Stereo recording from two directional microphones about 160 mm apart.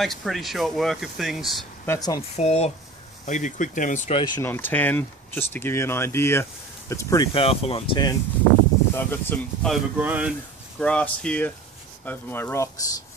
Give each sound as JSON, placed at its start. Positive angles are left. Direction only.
{"t": 0.0, "sound": "speech", "side_deg": 0}
{"t": 1.9, "sound": "speech", "side_deg": 25}
{"t": 2.3, "sound": "speech", "side_deg": 40}
{"t": 4.4, "sound": "speech", "side_deg": 15}
{"t": 7.3, "sound": "speech", "side_deg": 35}
{"t": 8.9, "sound": "speech", "side_deg": 15}
{"t": 9.9, "sound": "speech", "side_deg": -10}
{"t": 10.8, "sound": "speech", "side_deg": 5}